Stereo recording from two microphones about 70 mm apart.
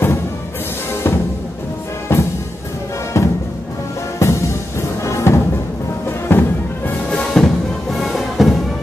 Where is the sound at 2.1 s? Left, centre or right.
Left.